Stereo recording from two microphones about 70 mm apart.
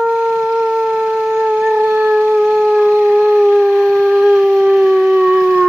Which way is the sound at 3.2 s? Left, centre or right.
Centre.